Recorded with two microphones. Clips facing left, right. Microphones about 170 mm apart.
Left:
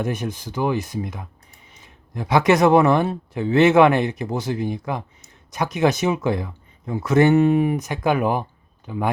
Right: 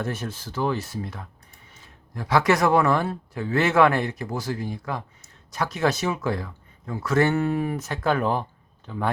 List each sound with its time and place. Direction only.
0.0 s speech: 15° left (ahead or behind)